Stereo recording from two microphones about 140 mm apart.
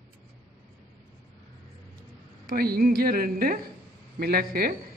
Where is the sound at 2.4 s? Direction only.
90° right.